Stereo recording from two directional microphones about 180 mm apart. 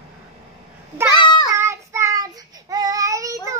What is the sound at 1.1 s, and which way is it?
Child singing, 25° left (ahead or behind).